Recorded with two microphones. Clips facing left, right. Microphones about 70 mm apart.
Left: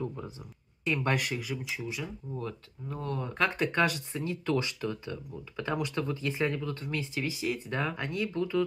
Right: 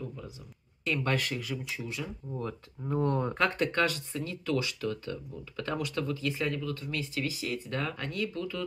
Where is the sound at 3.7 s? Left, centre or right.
Centre.